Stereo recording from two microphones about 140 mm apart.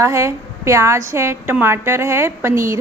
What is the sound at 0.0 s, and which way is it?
A woman's voice, 20° right (ahead or behind).